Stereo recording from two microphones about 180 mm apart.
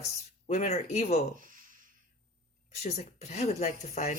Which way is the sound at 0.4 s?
40° left (ahead or behind).